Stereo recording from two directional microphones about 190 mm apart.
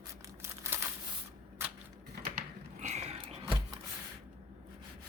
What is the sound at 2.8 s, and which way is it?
Music, 35° right (ahead or behind).